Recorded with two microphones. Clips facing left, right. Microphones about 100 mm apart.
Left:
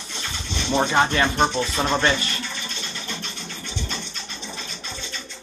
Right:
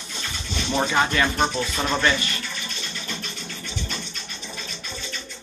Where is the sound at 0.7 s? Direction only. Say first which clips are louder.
Left 2 dB; 25° left (ahead or behind).